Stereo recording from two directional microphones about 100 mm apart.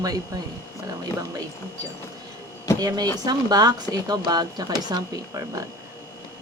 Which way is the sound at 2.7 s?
40° right (ahead or behind).